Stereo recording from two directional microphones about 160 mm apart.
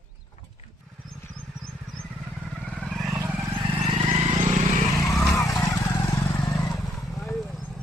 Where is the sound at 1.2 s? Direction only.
10° left (ahead or behind).